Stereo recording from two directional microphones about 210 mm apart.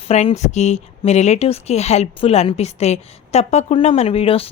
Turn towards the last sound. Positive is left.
turn(degrees=25)  # may be behind; listen again after turning